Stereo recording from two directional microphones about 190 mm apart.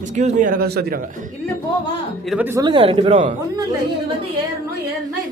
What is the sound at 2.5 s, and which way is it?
A man's voice, 20° right (ahead or behind).